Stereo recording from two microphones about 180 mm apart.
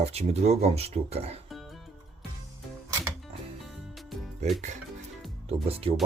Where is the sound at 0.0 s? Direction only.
35° right (ahead or behind).